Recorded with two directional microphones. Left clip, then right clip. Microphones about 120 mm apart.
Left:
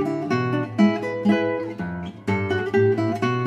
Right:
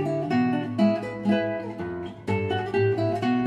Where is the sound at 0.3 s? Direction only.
35° left (ahead or behind).